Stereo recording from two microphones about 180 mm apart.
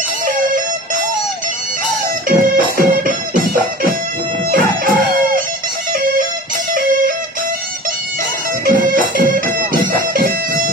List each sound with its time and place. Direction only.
0.3 s music: 50° right (ahead or behind)
2.2 s music: 50° right (ahead or behind)
4.5 s music: 55° right (ahead or behind)
8.6 s music: 50° right (ahead or behind)